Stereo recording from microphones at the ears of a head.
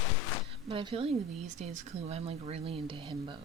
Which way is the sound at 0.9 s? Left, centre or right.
Right.